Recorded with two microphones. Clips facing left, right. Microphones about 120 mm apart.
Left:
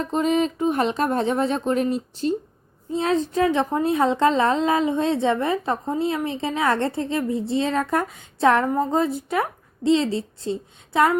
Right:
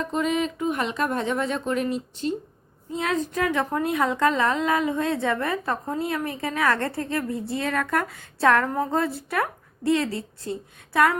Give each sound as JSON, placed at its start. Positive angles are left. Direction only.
{"t": 0.0, "sound": "a woman's voice", "side_deg": 35}